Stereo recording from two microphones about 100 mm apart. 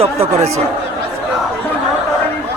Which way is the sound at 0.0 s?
90° right.